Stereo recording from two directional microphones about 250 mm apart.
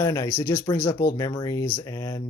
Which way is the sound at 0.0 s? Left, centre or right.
Centre.